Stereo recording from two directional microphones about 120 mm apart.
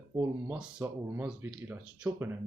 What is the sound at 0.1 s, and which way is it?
Speech, 20° right (ahead or behind).